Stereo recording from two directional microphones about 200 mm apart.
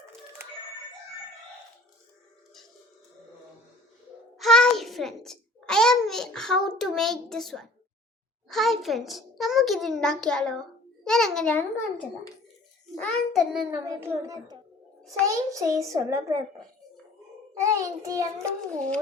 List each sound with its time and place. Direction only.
4.4 s a sound: centre (ahead or behind)
8.4 s a child's voice: centre (ahead or behind)
13.8 s a child's voice: 15° right (ahead or behind)